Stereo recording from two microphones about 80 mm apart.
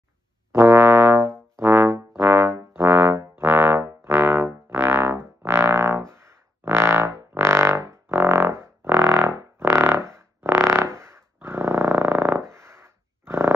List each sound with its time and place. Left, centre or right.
0.5 s brass instrument: right
4.0 s music: right
11.4 s a sound: right